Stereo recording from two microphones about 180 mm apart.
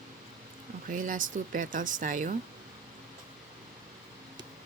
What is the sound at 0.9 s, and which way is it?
Speech, 45° right (ahead or behind).